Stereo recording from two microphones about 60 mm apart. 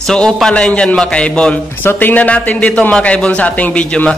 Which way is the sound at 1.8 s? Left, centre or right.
Left.